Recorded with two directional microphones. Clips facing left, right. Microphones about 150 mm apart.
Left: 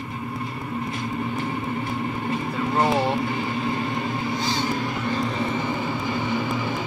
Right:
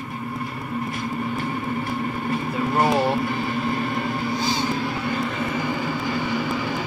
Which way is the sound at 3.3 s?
20° left (ahead or behind).